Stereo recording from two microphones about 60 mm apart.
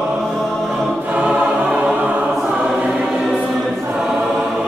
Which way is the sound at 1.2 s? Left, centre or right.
Centre.